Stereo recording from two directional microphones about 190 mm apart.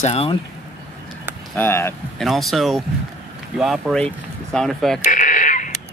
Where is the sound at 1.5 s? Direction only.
10° left (ahead or behind).